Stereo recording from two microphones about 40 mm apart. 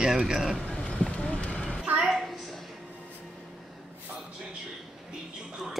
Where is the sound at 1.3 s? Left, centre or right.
Left.